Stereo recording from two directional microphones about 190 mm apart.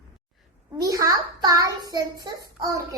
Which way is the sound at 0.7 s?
20° right (ahead or behind).